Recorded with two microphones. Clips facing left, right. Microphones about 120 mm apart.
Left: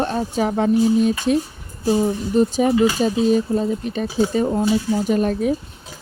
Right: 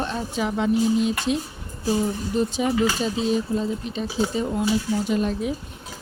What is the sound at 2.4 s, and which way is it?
Speech, 45° left (ahead or behind).